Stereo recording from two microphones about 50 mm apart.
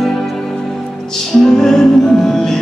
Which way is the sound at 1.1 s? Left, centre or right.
Centre.